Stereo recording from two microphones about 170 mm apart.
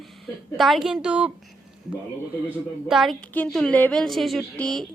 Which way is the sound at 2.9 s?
Centre (ahead or behind).